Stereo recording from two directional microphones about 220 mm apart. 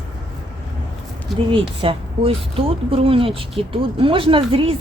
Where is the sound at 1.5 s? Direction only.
25° right (ahead or behind).